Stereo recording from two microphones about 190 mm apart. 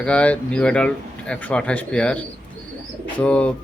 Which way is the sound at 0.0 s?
5° left (ahead or behind).